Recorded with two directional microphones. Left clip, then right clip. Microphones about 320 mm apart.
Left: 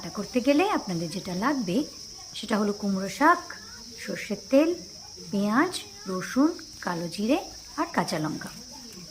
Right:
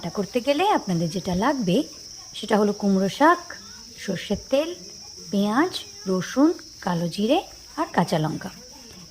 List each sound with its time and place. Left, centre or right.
0.0 s speech: centre